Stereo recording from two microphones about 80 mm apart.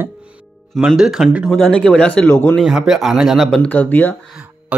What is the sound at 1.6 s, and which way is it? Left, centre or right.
Speech, centre.